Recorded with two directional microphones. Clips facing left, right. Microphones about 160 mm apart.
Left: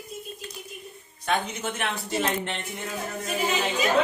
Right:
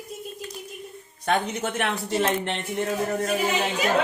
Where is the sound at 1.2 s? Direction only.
50° right (ahead or behind).